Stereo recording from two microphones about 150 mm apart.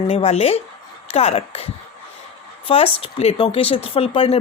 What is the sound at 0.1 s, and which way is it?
A woman's voice, 45° left (ahead or behind).